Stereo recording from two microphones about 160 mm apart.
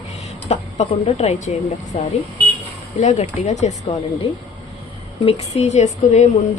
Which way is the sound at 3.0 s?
45° left (ahead or behind).